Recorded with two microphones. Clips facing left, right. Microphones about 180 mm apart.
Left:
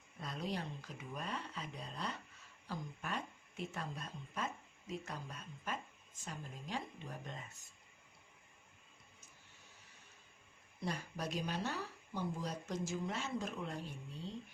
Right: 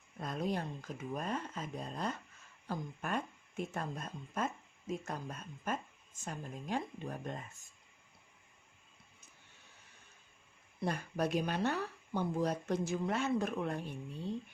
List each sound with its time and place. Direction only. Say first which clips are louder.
0.2 s speech: right 5 dB; 50° right (ahead or behind)
10.8 s speech: right 7 dB; 55° right (ahead or behind)